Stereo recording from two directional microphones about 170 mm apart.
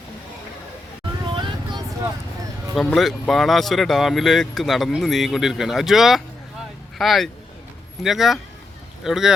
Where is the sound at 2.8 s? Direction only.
Centre (ahead or behind).